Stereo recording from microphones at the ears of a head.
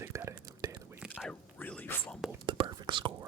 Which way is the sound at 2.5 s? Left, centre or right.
Right.